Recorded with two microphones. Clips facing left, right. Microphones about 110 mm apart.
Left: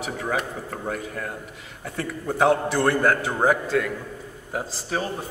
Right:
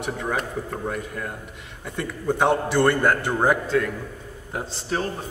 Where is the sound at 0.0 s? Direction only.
Centre (ahead or behind).